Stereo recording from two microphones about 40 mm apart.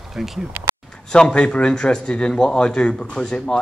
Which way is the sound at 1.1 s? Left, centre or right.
Left.